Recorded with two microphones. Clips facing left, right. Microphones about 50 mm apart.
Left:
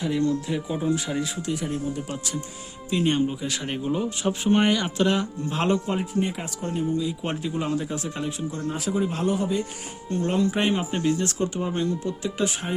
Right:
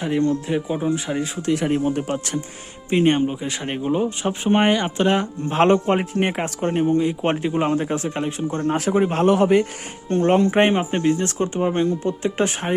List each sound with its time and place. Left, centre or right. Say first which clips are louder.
0.0 s speech: right 3 dB; right
1.4 s a man's voice: right 8 dB; right
2.9 s speech: right 5 dB; right
3.2 s speech: right 3 dB; right
8.6 s a man's voice: right 7 dB; right
10.1 s speech: right 7 dB; right